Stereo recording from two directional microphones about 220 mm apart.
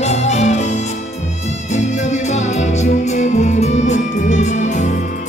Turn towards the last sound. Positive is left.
turn(degrees=30)  # may be behind; listen again after turning